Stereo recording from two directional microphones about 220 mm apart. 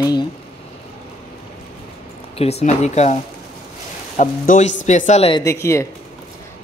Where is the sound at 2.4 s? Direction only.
30° left (ahead or behind).